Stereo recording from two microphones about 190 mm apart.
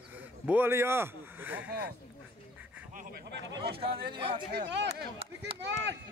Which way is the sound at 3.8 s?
25° right (ahead or behind).